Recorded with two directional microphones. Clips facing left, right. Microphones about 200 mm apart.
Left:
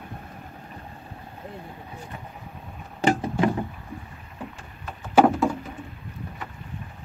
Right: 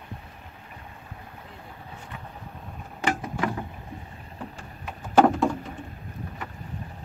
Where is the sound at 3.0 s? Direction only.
30° left (ahead or behind).